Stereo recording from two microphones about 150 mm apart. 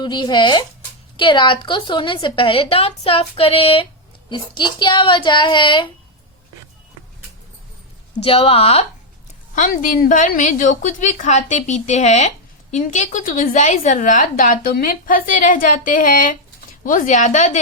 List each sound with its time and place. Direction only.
0.0 s a woman's voice: 30° left (ahead or behind)
8.2 s a woman's voice: 40° left (ahead or behind)
9.6 s a woman's voice: 65° left (ahead or behind)